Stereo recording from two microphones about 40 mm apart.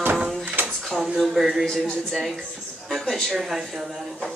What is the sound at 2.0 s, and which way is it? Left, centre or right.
Speech, centre.